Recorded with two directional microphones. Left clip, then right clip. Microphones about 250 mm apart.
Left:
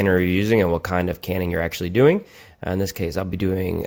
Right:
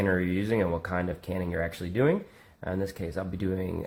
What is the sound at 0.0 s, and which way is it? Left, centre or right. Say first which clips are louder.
Speech: left 8 dB; left.